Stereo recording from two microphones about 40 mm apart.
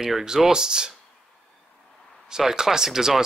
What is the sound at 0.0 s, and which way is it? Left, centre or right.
Speech, centre.